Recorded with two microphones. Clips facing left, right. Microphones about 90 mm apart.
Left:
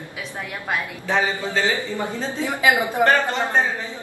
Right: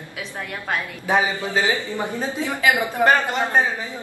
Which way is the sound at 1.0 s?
15° right (ahead or behind).